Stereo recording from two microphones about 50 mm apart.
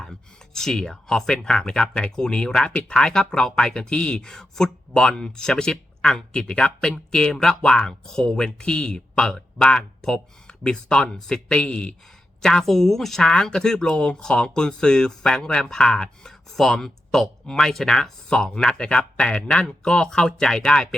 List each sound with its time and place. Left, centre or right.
0.0 s speech: centre
12.4 s speech: centre